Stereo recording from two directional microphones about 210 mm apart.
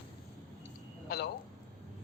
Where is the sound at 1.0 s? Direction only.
50° left (ahead or behind).